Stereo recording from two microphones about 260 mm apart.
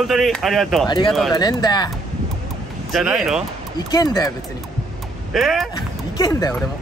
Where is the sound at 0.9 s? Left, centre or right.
Centre.